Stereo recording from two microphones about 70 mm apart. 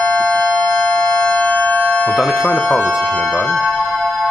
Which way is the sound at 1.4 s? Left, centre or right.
Left.